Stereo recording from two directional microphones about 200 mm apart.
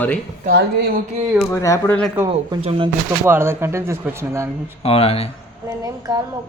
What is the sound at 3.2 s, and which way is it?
A woman's voice, 10° right (ahead or behind).